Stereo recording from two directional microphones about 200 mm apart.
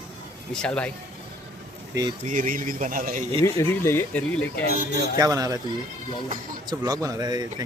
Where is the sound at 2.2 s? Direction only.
40° right (ahead or behind).